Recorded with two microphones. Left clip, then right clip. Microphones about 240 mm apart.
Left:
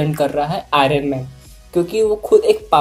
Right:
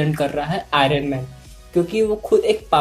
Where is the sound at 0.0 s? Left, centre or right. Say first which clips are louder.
Left 4 dB; centre.